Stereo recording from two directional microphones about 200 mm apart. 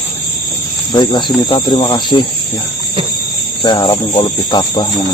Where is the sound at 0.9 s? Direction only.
20° left (ahead or behind).